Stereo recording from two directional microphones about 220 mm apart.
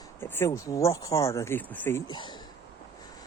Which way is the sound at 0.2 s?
10° left (ahead or behind).